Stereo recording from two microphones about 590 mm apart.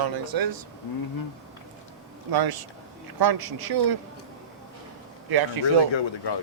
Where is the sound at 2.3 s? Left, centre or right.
Right.